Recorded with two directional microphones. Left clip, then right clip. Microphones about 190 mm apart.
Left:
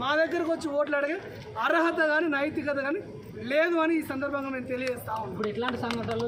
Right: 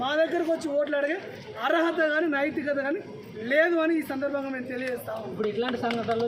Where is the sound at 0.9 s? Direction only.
10° left (ahead or behind).